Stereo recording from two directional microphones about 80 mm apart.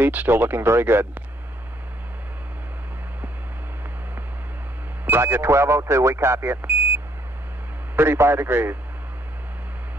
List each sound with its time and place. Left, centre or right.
0.0 s speech: right
5.0 s speech: right
7.9 s speech: right